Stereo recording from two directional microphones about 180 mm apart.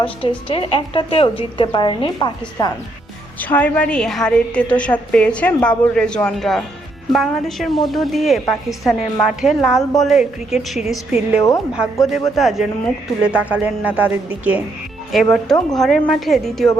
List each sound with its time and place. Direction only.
0.0 s a woman's voice: 30° left (ahead or behind)
3.4 s a woman's voice: 10° left (ahead or behind)